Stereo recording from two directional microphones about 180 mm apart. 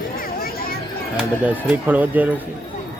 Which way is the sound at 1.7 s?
10° right (ahead or behind).